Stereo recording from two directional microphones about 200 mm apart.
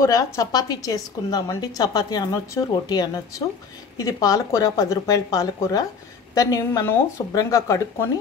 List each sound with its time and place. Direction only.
0.0 s a woman's voice: 15° left (ahead or behind)